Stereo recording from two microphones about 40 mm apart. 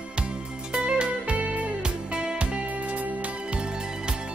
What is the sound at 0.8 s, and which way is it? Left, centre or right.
Music, right.